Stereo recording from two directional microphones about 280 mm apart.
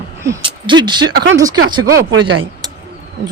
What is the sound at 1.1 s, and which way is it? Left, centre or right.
Speech, right.